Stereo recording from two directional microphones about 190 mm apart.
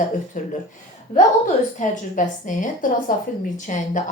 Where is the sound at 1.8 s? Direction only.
40° left (ahead or behind).